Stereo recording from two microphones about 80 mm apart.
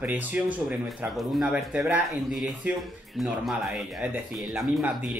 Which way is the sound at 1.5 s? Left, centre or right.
Centre.